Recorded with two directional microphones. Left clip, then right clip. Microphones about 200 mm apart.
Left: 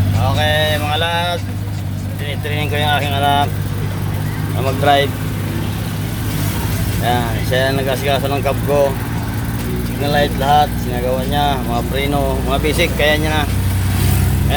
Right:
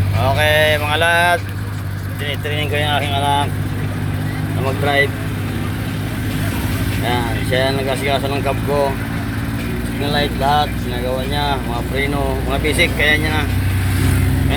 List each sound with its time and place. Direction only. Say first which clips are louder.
0.2 s vehicle: right 3 dB; centre (ahead or behind)
2.6 s speech: left 2 dB; 10° left (ahead or behind)
7.0 s speech: left 3 dB; 10° left (ahead or behind)
10.1 s speech: left 3 dB; 15° left (ahead or behind)